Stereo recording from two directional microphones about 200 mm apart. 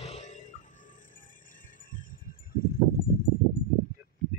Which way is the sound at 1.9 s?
45° left (ahead or behind).